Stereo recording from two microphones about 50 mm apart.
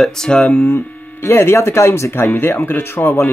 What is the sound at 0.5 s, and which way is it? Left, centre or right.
Speech, left.